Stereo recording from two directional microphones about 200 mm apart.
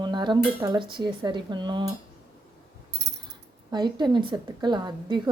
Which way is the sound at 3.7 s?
20° right (ahead or behind).